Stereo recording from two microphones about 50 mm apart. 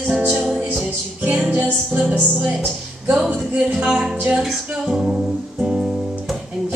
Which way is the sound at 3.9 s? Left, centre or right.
Right.